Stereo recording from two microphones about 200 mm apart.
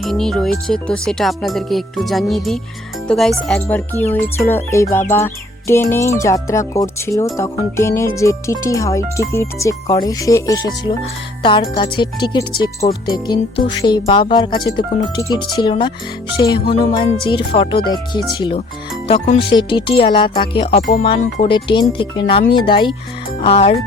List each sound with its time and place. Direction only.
0.0 s speech: centre (ahead or behind)
4.1 s music: 10° left (ahead or behind)
11.4 s speech: 25° left (ahead or behind)
19.0 s speech: 35° left (ahead or behind)